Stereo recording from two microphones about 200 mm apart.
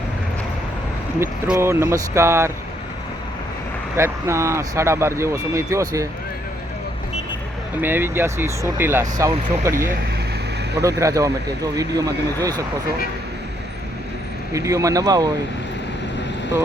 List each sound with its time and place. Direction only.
1.2 s speech: 10° right (ahead or behind)
3.9 s speech: 15° right (ahead or behind)
7.8 s speech: 10° right (ahead or behind)
14.5 s speech: 15° right (ahead or behind)